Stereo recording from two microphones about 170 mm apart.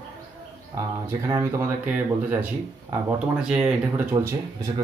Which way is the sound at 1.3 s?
15° right (ahead or behind).